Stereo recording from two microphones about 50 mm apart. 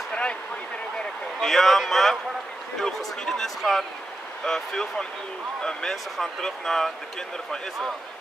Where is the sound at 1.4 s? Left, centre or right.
Centre.